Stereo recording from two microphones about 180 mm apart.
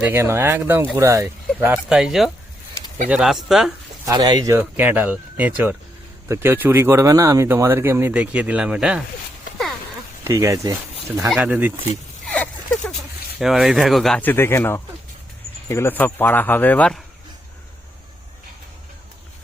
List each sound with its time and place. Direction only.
0.0 s speech: 10° right (ahead or behind)
4.0 s speech: 20° right (ahead or behind)
4.6 s speech: 10° right (ahead or behind)
10.2 s speech: 15° right (ahead or behind)
11.3 s speech: 5° right (ahead or behind)
12.3 s a sound: 5° left (ahead or behind)
13.4 s speech: centre (ahead or behind)